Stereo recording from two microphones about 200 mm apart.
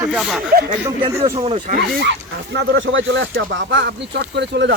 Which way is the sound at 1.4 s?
25° right (ahead or behind).